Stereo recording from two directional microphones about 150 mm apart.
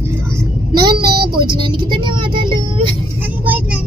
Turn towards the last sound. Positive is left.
turn(degrees=-10)  # may be behind; listen again after turning